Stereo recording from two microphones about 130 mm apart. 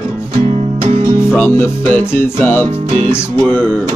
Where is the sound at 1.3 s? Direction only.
15° left (ahead or behind).